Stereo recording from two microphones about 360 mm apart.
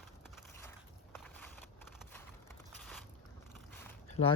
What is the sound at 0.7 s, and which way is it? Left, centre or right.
Walk, centre.